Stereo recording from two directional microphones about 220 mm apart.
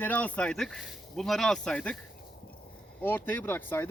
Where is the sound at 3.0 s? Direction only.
10° left (ahead or behind).